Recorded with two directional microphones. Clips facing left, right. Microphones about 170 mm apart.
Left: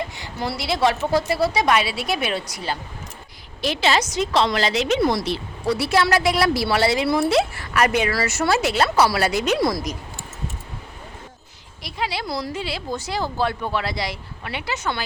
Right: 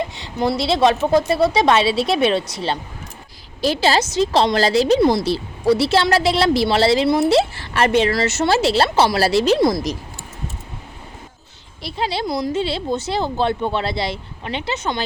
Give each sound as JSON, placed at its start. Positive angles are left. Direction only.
{"t": 0.2, "sound": "a woman's voice", "side_deg": -20}
{"t": 4.9, "sound": "a woman's voice", "side_deg": -25}
{"t": 11.8, "sound": "a woman's voice", "side_deg": -30}